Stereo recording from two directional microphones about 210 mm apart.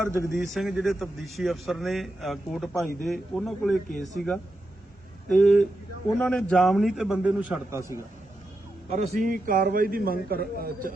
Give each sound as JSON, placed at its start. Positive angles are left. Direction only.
{"t": 0.0, "sound": "a man's voice", "side_deg": -10}
{"t": 0.3, "sound": "a man's voice", "side_deg": 0}
{"t": 8.9, "sound": "a man's voice", "side_deg": -35}